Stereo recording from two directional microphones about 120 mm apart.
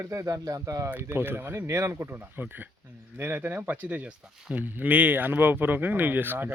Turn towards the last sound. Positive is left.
turn(degrees=-15)  # may be behind; listen again after turning